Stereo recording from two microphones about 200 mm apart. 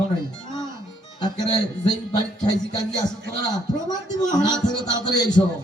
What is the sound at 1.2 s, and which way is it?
A man's voice, 20° left (ahead or behind).